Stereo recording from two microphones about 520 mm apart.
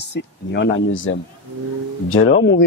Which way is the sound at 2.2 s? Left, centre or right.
Left.